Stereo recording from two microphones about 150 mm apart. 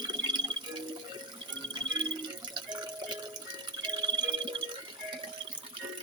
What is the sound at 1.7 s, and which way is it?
Music, 30° right (ahead or behind).